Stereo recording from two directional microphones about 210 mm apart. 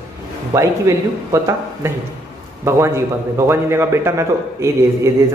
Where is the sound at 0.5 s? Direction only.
15° right (ahead or behind).